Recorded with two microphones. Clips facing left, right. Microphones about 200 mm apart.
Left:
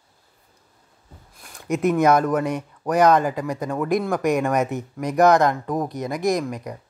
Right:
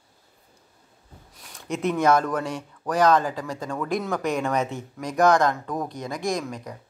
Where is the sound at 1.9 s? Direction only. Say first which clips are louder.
Left 2 dB; 10° left (ahead or behind).